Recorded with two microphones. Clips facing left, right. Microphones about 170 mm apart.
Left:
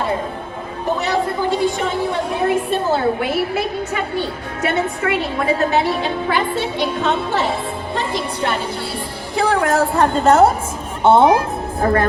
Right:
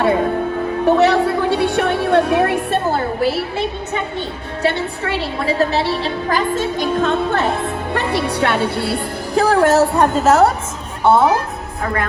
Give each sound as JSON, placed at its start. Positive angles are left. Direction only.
{"t": 0.9, "sound": "a woman's voice", "side_deg": -70}
{"t": 3.2, "sound": "a woman's voice", "side_deg": -30}
{"t": 7.9, "sound": "speech", "side_deg": -70}
{"t": 9.3, "sound": "a woman's voice", "side_deg": -35}
{"t": 10.0, "sound": "a woman's voice", "side_deg": -5}
{"t": 11.0, "sound": "a woman's voice", "side_deg": 25}